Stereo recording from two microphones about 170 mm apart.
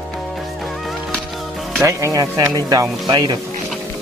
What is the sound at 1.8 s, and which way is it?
Speech, 15° right (ahead or behind).